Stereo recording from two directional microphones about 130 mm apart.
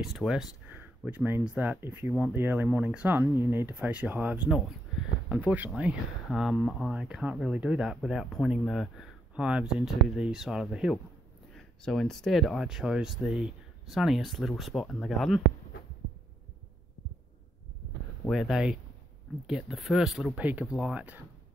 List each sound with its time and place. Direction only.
0.0 s speech: centre (ahead or behind)
0.7 s speech: 15° right (ahead or behind)
18.3 s speech: 5° right (ahead or behind)